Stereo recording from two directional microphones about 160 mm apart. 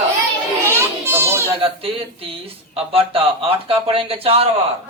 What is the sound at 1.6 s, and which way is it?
Speech, 35° right (ahead or behind).